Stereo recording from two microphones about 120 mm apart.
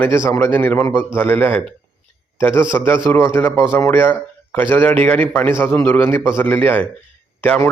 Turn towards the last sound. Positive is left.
turn(degrees=15)  # may be behind; listen again after turning